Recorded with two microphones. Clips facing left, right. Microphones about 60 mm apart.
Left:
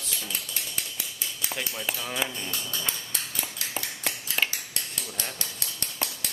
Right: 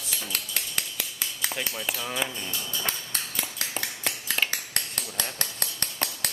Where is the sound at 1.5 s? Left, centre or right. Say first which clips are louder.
Left 1 dB; centre.